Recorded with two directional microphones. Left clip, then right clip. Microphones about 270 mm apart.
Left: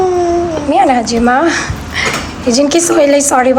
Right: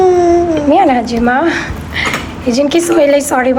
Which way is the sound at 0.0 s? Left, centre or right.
Right.